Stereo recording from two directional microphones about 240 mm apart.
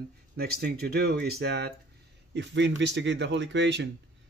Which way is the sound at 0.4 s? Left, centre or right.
Right.